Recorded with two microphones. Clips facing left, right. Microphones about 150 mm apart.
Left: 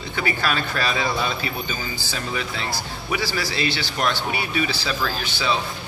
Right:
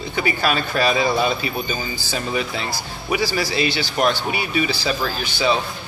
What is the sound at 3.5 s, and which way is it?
A man's voice, 5° right (ahead or behind).